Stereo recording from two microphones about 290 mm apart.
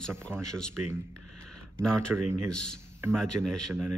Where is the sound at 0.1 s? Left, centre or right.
Centre.